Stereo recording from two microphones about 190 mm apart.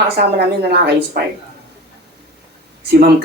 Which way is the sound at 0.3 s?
60° right (ahead or behind).